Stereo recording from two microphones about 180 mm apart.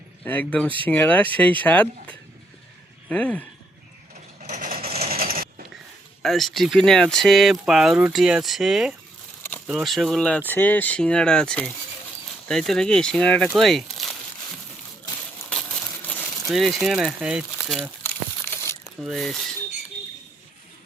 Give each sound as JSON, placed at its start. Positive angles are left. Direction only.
{"t": 0.3, "sound": "speech", "side_deg": 10}
{"t": 4.4, "sound": "vehicle", "side_deg": -45}
{"t": 4.9, "sound": "a sound", "side_deg": -35}
{"t": 5.1, "sound": "sewing machine", "side_deg": -55}
{"t": 6.2, "sound": "speech", "side_deg": 0}
{"t": 9.4, "sound": "a sound", "side_deg": 10}
{"t": 9.6, "sound": "speech", "side_deg": 0}
{"t": 16.5, "sound": "speech", "side_deg": 0}
{"t": 18.0, "sound": "crumpling", "side_deg": 10}
{"t": 18.9, "sound": "speech", "side_deg": 0}